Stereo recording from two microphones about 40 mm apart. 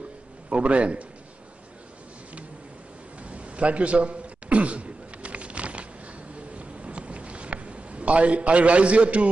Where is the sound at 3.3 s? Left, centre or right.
Right.